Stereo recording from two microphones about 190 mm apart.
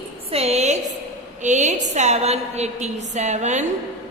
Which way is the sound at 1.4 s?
40° right (ahead or behind).